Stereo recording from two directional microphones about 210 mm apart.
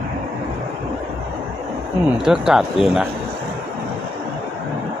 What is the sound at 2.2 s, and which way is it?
Speech, 5° right (ahead or behind).